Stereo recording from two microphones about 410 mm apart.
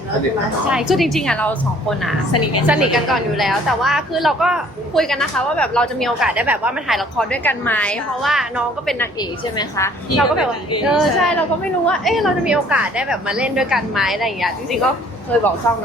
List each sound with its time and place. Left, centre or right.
0.7 s a woman's voice: centre
2.3 s a woman's voice: left
2.6 s a woman's voice: centre